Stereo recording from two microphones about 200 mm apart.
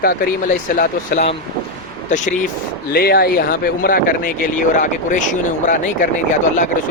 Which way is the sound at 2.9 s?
50° left (ahead or behind).